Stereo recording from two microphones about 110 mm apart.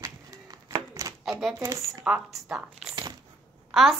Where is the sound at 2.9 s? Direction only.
40° right (ahead or behind).